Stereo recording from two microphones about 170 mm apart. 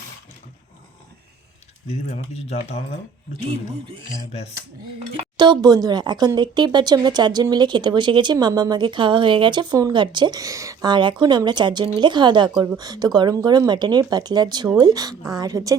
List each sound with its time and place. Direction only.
1.9 s speech: 35° left (ahead or behind)
5.1 s speech: 25° right (ahead or behind)